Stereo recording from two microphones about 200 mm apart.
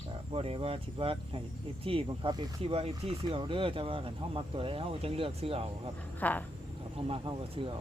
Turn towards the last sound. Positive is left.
turn(degrees=-25)  # may be behind; listen again after turning